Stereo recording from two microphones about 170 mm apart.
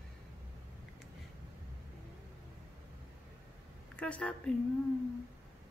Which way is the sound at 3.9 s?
5° left (ahead or behind).